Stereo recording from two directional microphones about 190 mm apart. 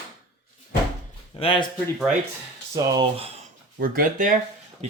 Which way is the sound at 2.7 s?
20° right (ahead or behind).